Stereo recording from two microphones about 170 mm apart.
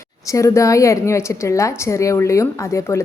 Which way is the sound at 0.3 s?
20° left (ahead or behind).